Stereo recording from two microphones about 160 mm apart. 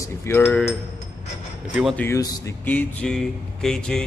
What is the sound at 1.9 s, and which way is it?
Speech, 15° left (ahead or behind).